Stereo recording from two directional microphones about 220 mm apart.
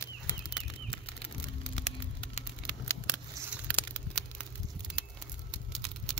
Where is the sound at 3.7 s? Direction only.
5° left (ahead or behind).